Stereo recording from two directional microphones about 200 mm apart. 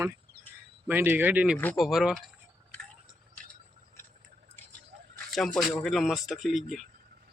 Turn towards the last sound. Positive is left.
turn(degrees=0)  # may be behind; listen again after turning